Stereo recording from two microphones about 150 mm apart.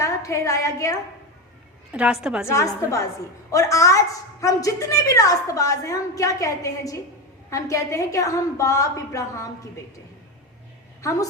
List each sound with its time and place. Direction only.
0.0 s a woman's voice: 20° left (ahead or behind)
1.9 s a woman's voice: 5° right (ahead or behind)
2.5 s a woman's voice: 20° left (ahead or behind)